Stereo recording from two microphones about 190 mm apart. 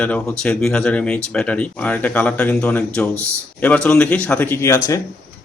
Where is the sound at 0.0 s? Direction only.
5° left (ahead or behind).